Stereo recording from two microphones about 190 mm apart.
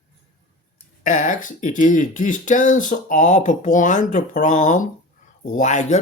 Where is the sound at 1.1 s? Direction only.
45° left (ahead or behind).